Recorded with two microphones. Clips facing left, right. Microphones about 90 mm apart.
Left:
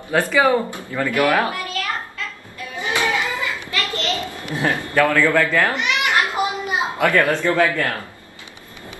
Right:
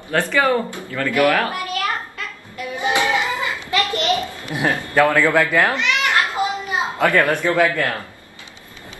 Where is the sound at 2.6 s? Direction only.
20° right (ahead or behind).